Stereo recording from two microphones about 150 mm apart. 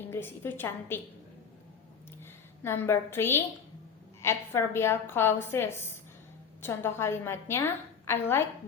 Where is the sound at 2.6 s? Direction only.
15° left (ahead or behind).